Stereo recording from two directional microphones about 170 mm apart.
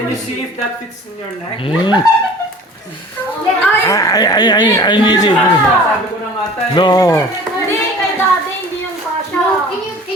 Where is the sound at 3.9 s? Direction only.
20° left (ahead or behind).